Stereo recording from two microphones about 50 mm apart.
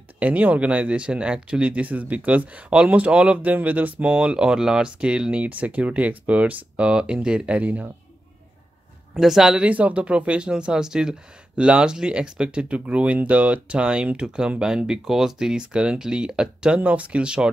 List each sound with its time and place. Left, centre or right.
0.2 s speech: right
3.5 s speech: right
9.1 s speech: centre
9.6 s speech: right; by 16.8 s centre
16.8 s speech: right